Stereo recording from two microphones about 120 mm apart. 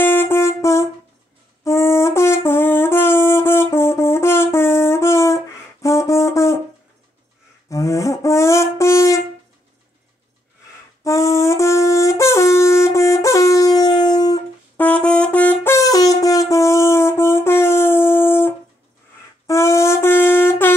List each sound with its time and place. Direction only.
0.0 s music: 20° left (ahead or behind)
1.6 s brass instrument: 20° left (ahead or behind)
7.7 s shofar: 25° left (ahead or behind)
11.1 s shofar: 25° left (ahead or behind)
14.8 s brass instrument: 10° left (ahead or behind)
19.4 s wind instrument: 25° left (ahead or behind)